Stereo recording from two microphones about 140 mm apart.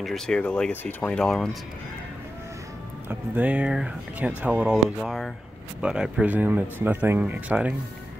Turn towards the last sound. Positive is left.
turn(degrees=-10)  # may be behind; listen again after turning